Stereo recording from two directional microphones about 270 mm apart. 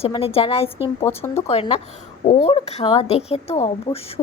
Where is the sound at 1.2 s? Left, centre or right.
Centre.